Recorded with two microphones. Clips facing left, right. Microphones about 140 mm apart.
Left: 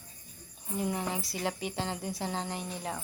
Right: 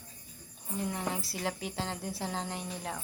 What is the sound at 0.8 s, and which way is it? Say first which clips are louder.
Speech: left 2 dB; 5° left (ahead or behind).